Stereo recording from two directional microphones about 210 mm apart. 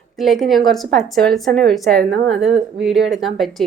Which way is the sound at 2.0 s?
50° right (ahead or behind).